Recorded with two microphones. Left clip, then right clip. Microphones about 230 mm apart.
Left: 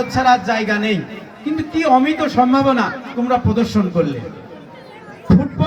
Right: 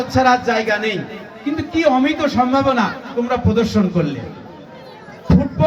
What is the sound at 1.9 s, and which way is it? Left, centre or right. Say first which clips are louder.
Speech: left 2 dB; left.